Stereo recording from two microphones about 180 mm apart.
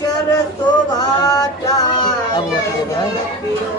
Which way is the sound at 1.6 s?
25° left (ahead or behind).